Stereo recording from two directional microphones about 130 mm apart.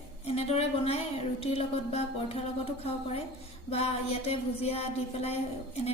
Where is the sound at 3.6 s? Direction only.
50° left (ahead or behind).